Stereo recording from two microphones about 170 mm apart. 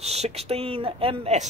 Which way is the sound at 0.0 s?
40° right (ahead or behind).